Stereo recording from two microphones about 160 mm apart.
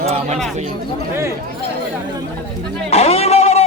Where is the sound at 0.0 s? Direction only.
40° right (ahead or behind).